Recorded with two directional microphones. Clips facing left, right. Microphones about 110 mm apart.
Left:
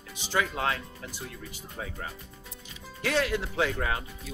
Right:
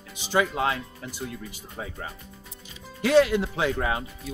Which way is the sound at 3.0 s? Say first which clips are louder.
Right 8 dB; 20° right (ahead or behind).